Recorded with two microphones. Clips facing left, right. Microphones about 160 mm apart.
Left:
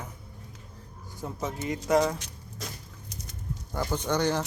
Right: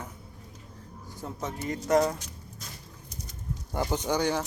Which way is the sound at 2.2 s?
85° left.